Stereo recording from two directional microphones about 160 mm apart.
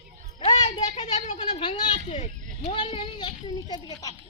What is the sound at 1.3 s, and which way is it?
Cat, 30° left (ahead or behind).